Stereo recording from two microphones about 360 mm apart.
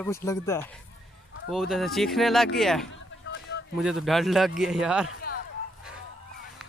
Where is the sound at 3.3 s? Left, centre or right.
Left.